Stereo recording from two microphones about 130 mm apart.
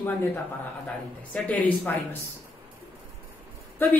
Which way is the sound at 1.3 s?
10° left (ahead or behind).